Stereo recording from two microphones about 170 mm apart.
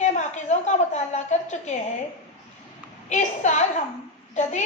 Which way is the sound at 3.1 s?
45° left (ahead or behind).